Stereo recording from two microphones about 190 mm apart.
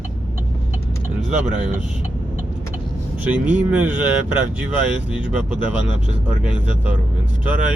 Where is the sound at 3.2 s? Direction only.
10° right (ahead or behind).